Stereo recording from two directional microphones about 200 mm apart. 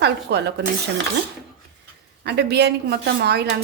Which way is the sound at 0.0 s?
55° right (ahead or behind).